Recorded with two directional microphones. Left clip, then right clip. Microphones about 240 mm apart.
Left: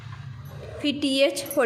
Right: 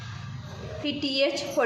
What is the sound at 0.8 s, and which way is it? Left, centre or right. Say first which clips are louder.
Speech: left 4 dB; left.